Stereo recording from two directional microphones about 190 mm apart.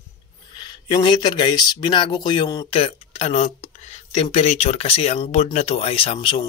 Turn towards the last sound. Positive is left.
turn(degrees=25)  # may be behind; listen again after turning